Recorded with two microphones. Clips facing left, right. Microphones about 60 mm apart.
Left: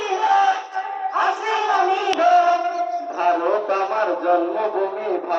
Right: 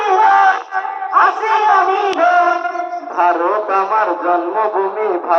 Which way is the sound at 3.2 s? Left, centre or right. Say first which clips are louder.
Right 6 dB; right.